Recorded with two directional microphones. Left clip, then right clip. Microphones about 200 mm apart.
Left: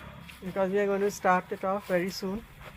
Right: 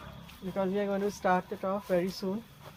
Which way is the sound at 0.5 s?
45° left (ahead or behind).